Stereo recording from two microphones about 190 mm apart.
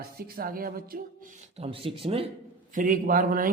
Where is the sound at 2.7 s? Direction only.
45° right (ahead or behind).